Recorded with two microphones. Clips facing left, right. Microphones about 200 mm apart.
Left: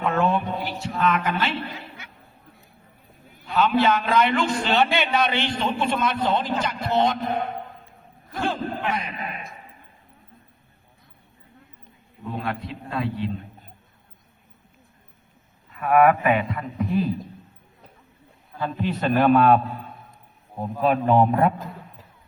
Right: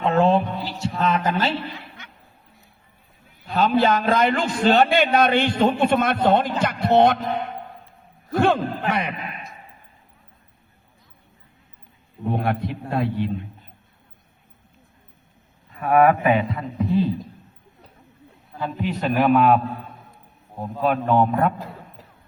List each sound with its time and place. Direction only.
0.0 s a sound: 30° right (ahead or behind)
3.4 s a man's voice: 35° right (ahead or behind); by 7.2 s 60° right (ahead or behind)
8.4 s a man's voice: 70° right (ahead or behind)
12.2 s a man's voice: 60° right (ahead or behind)
15.7 s a man's voice: 35° right (ahead or behind)
18.6 s a man's voice: 10° right (ahead or behind)